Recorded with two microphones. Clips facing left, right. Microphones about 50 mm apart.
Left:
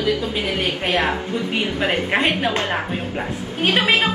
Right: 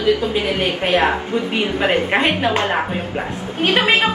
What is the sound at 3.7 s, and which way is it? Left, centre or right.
Speech, right.